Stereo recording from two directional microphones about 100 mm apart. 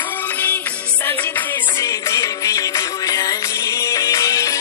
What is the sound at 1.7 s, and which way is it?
Music, 35° left (ahead or behind).